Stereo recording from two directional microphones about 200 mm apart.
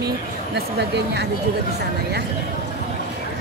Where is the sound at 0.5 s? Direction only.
55° right (ahead or behind).